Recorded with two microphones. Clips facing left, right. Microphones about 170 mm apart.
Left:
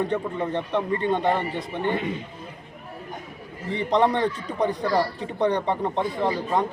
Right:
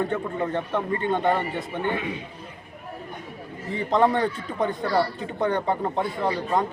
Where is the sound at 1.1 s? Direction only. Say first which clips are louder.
Right 2 dB; centre (ahead or behind).